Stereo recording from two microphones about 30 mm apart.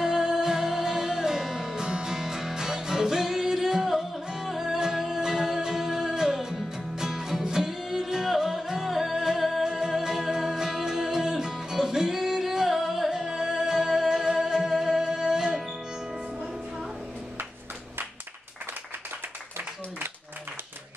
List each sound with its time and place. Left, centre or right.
0.0 s music: right
9.1 s music: centre
9.4 s music: centre
9.7 s music: centre